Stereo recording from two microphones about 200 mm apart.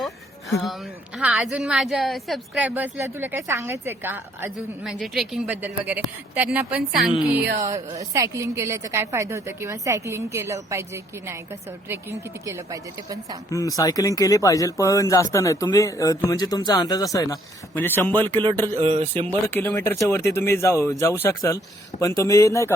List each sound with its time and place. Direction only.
0.6 s a woman's voice: centre (ahead or behind)
7.6 s a woman's voice: 15° right (ahead or behind)
12.5 s a woman's voice: 15° right (ahead or behind)
13.5 s speech: 15° left (ahead or behind)
18.8 s speech: 30° right (ahead or behind)
19.5 s speech: 10° left (ahead or behind)